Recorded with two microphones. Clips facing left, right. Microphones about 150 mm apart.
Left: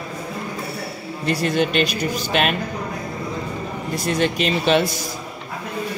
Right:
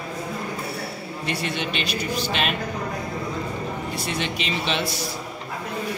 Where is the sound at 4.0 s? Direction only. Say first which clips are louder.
Left 11 dB; 45° left (ahead or behind).